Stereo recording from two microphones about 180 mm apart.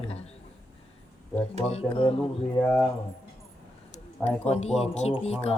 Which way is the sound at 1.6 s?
30° left (ahead or behind).